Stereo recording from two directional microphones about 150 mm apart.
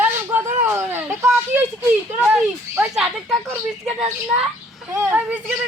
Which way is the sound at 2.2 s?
5° right (ahead or behind).